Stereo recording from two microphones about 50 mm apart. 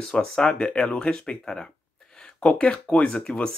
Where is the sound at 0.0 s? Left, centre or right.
Centre.